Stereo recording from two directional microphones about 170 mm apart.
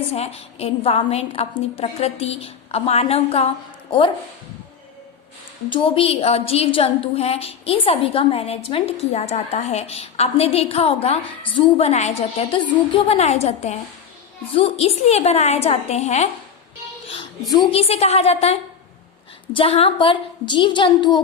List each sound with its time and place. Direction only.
0.1 s a woman's voice: 35° left (ahead or behind)
5.6 s a woman's voice: 30° left (ahead or behind)
17.5 s a woman's voice: 25° left (ahead or behind)
17.7 s a woman's voice: 35° left (ahead or behind)